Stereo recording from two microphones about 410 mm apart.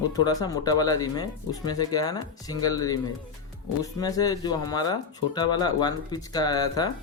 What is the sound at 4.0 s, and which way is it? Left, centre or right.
Speech, centre.